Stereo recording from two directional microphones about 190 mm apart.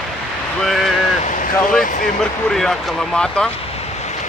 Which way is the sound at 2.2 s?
Centre (ahead or behind).